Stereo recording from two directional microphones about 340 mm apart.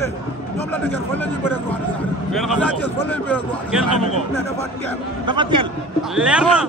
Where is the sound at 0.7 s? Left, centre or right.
Centre.